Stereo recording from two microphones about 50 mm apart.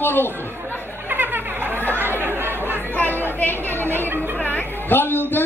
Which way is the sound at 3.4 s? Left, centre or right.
Left.